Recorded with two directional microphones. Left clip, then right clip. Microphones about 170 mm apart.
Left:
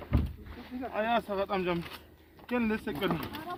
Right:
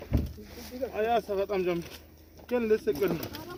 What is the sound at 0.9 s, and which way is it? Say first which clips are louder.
Speech: right 2 dB; 25° left (ahead or behind).